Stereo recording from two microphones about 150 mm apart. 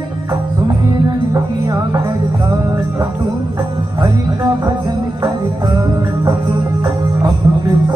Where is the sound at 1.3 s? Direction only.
20° right (ahead or behind).